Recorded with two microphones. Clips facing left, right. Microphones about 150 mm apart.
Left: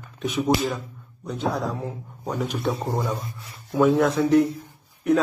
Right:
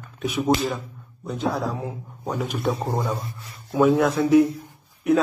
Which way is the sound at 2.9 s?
15° right (ahead or behind).